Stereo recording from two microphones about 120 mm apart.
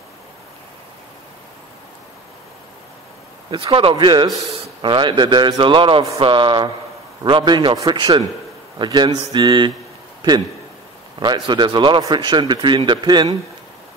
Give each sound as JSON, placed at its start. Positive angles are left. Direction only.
{"t": 3.4, "sound": "a man's voice", "side_deg": -45}
{"t": 11.1, "sound": "a man's voice", "side_deg": -40}